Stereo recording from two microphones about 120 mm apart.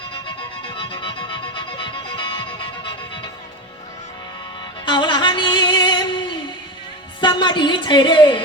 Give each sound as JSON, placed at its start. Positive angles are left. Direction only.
{"t": 0.8, "sound": "music", "side_deg": 45}
{"t": 4.9, "sound": "music", "side_deg": 40}
{"t": 7.2, "sound": "a woman's voice", "side_deg": 40}